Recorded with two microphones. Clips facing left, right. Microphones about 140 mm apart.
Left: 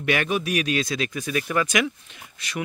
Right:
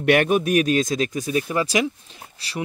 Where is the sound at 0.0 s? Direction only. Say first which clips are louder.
Right 6 dB; 55° right (ahead or behind).